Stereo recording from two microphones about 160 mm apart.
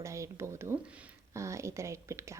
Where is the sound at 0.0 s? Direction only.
20° right (ahead or behind).